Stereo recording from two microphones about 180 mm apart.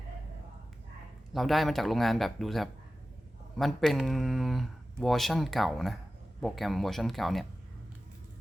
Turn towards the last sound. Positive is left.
turn(degrees=0)  # may be behind; listen again after turning